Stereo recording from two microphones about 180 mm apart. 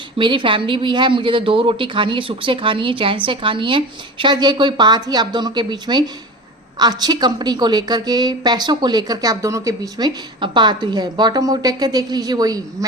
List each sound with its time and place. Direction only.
0.2 s a woman's voice: 25° right (ahead or behind)